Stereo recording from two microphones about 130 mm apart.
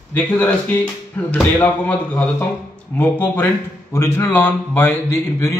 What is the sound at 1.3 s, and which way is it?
A man's voice, 10° left (ahead or behind).